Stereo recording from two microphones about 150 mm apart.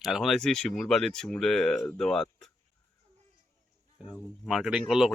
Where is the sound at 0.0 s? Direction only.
Centre (ahead or behind).